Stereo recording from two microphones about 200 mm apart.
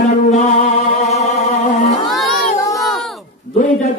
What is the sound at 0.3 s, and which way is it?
Music, 35° left (ahead or behind).